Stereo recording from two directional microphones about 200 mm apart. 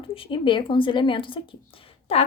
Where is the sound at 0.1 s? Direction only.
25° left (ahead or behind).